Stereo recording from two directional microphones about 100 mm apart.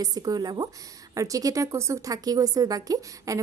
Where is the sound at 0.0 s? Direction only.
40° right (ahead or behind).